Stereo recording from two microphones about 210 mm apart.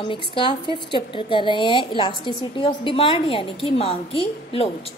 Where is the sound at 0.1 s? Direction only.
25° left (ahead or behind).